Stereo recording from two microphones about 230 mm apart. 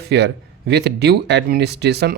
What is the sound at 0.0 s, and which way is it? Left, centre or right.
A man's voice, right.